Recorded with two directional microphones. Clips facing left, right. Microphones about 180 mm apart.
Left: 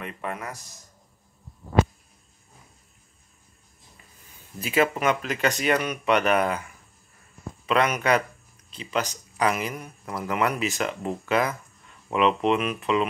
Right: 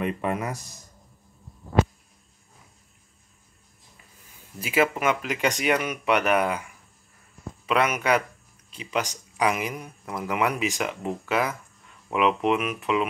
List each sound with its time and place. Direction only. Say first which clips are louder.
0.0 s speech: right 6 dB; 20° right (ahead or behind)
4.6 s speech: even; 10° right (ahead or behind)